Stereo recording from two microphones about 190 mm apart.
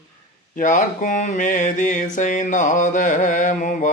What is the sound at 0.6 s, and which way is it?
Mantra, 40° left (ahead or behind).